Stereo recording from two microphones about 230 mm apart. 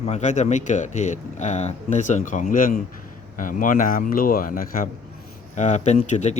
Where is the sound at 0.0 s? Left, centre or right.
Left.